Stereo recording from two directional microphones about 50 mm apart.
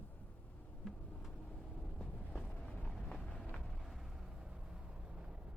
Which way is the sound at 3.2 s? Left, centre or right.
Left.